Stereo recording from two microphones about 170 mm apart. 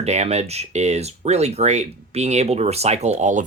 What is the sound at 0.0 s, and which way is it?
Speech, 40° right (ahead or behind).